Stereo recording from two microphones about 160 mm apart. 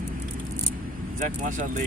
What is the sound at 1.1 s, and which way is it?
Speech, 50° right (ahead or behind).